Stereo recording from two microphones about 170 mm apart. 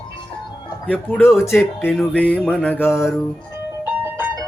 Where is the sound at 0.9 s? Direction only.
5° left (ahead or behind).